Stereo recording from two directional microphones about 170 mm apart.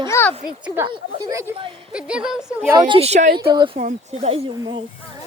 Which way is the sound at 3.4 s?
25° right (ahead or behind).